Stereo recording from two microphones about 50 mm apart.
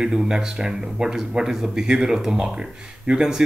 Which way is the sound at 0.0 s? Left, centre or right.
Centre.